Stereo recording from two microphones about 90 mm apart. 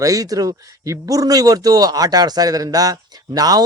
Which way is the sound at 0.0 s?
40° right (ahead or behind).